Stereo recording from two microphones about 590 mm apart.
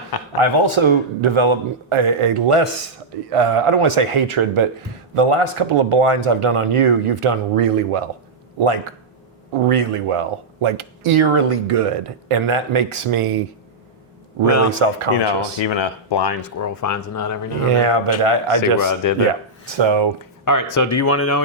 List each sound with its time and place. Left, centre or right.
0.3 s a man's voice: right
14.7 s speech: right
15.2 s speech: left
16.6 s speech: left
17.7 s speech: right
18.5 s speech: left
19.6 s a man's voice: right
20.4 s speech: left